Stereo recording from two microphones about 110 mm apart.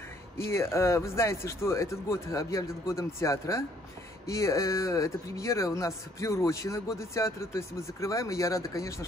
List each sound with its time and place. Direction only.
0.5 s speech: 25° left (ahead or behind)